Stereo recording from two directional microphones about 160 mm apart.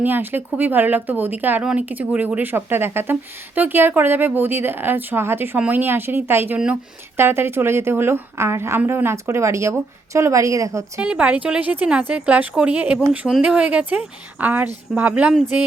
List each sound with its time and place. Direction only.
0.0 s speech: 10° right (ahead or behind)
11.0 s speech: 5° right (ahead or behind)